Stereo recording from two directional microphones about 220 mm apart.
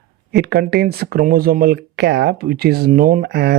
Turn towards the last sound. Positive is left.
turn(degrees=-45)  # may be behind; listen again after turning